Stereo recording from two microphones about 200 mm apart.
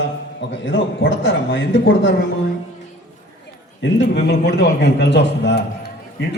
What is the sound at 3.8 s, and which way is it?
A man's voice, 60° left (ahead or behind).